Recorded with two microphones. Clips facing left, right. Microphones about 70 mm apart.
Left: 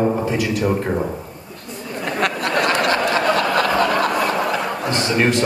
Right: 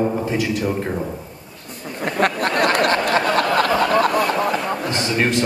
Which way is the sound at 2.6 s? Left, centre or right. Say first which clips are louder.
Right 1 dB; right.